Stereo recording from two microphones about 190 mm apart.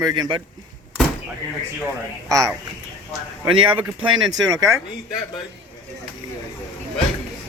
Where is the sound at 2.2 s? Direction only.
15° right (ahead or behind).